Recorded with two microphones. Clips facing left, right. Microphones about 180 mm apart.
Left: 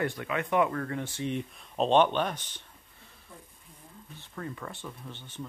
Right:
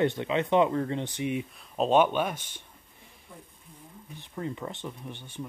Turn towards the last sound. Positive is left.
turn(degrees=-15)  # may be behind; listen again after turning